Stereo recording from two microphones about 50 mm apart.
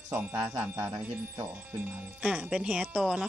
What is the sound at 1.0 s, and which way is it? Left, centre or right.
Speech, right.